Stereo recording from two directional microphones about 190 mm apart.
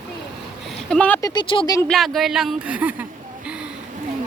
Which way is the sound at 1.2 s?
20° left (ahead or behind).